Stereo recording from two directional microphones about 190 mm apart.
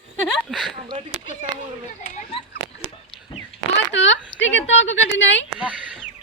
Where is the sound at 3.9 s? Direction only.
75° left (ahead or behind).